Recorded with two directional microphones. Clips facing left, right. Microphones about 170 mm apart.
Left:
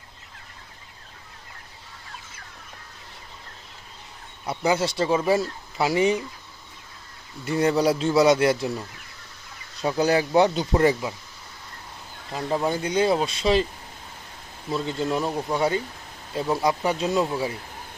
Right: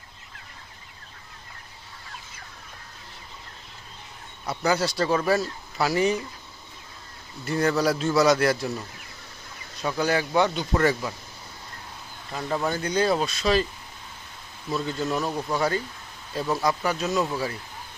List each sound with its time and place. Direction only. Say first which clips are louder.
4.4 s speech: left 1 dB; 25° left (ahead or behind)
7.6 s speech: left 2 dB; 30° left (ahead or behind)
10.1 s speech: left 4 dB; 35° left (ahead or behind)
10.8 s speech: left 2 dB; 20° left (ahead or behind)
12.3 s speech: left 2 dB; 20° left (ahead or behind)
14.7 s speech: left 1 dB; 25° left (ahead or behind)
15.2 s speech: left 2 dB; 15° left (ahead or behind)
15.5 s speech: left 2 dB; 25° left (ahead or behind)